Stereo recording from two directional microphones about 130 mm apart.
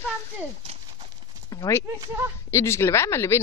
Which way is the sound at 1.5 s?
25° left (ahead or behind).